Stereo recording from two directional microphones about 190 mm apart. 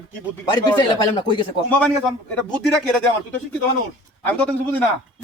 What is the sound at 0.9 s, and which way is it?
Speech, 25° left (ahead or behind).